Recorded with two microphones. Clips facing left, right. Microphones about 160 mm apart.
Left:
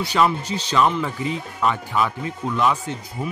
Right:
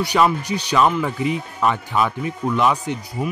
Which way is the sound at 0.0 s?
15° right (ahead or behind).